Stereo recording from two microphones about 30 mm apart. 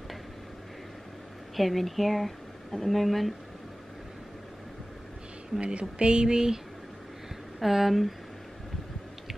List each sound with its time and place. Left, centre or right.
1.6 s speech: centre
5.6 s speech: right
7.6 s speech: centre